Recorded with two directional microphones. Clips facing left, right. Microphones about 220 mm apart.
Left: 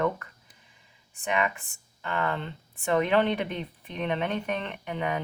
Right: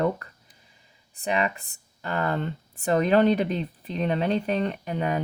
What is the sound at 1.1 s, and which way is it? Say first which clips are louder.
Speech: right 2 dB; 35° right (ahead or behind).